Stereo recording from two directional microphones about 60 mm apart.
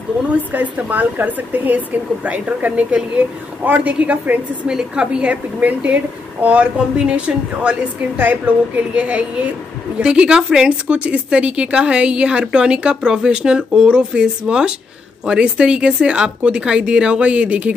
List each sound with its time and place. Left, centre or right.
0.2 s speech: right
4.6 s speech: centre
8.2 s speech: right